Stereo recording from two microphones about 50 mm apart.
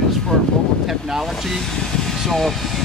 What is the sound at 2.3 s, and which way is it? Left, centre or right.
Speech, centre.